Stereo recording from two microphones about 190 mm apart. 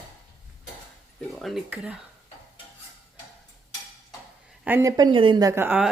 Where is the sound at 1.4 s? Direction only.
Centre (ahead or behind).